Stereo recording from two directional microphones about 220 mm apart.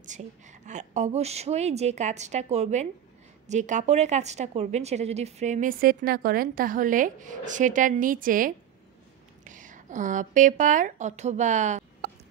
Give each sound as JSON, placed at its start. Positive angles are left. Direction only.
{"t": 0.0, "sound": "a woman's voice", "side_deg": -35}